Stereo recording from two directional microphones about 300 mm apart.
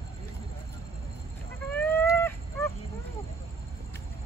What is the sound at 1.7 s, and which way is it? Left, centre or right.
Chicken, centre.